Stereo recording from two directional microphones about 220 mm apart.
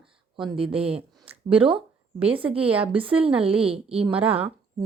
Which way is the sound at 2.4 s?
5° right (ahead or behind).